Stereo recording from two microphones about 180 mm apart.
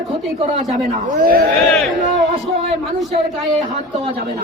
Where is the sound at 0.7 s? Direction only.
45° right (ahead or behind).